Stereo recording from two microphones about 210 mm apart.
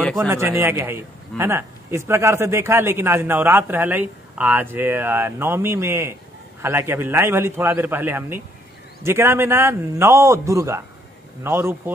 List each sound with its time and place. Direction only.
0.0 s a man's voice: centre (ahead or behind)
0.3 s a man's voice: 10° right (ahead or behind)